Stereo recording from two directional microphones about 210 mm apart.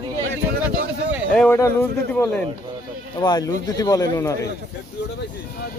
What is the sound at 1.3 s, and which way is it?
Speech, 5° left (ahead or behind).